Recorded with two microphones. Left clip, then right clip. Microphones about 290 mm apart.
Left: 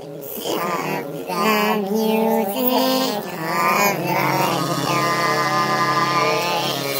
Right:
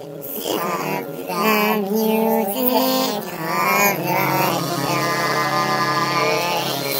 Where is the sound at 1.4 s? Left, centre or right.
Right.